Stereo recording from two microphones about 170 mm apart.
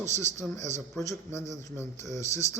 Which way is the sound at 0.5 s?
45° right (ahead or behind).